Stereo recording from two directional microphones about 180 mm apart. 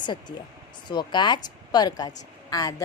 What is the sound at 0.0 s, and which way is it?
Speech, 25° left (ahead or behind).